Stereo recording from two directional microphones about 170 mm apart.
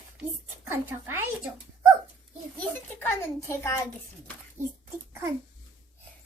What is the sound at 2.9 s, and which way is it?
Speech, 15° left (ahead or behind).